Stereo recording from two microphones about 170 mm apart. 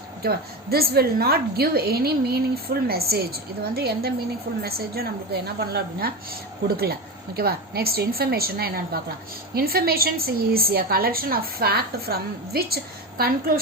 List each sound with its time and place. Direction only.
0.2 s a woman's voice: 65° right (ahead or behind)
7.3 s a woman's voice: 65° right (ahead or behind)